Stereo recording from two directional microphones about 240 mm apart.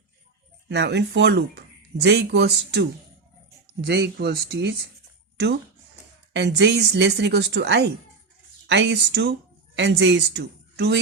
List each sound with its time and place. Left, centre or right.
0.7 s speech: right
6.3 s a woman's voice: right